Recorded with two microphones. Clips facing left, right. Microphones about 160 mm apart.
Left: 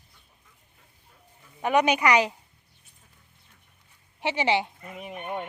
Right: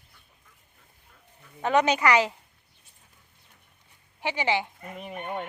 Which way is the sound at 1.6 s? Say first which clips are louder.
Even; 15° left (ahead or behind).